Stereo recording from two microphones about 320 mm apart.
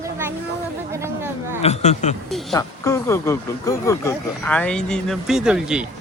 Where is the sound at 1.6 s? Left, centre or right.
Left.